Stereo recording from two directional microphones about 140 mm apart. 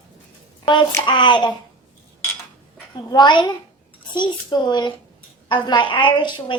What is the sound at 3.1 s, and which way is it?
A woman's voice, 30° left (ahead or behind).